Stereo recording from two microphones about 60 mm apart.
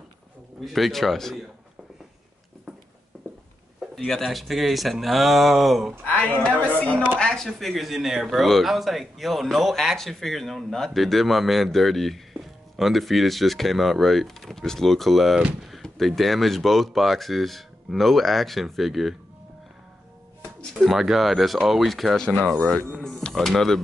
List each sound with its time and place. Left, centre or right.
0.7 s speech: centre
3.9 s speech: centre
6.0 s speech: centre
20.9 s speech: centre